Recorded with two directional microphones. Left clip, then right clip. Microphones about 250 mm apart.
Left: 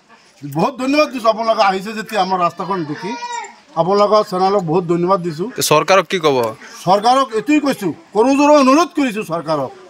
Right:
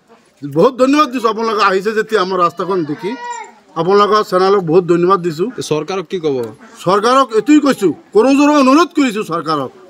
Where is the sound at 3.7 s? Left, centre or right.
Centre.